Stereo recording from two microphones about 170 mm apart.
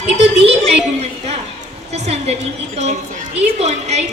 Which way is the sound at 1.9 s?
40° right (ahead or behind).